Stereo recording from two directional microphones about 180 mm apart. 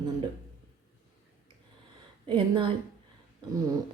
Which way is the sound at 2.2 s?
30° right (ahead or behind).